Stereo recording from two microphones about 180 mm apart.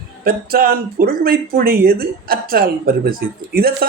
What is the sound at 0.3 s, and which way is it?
Speech, 55° right (ahead or behind).